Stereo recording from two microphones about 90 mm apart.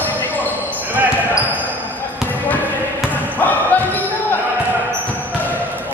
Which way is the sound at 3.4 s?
20° left (ahead or behind).